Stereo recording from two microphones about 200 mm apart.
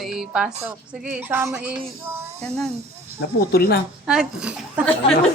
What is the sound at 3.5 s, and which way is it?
Speech, 50° left (ahead or behind).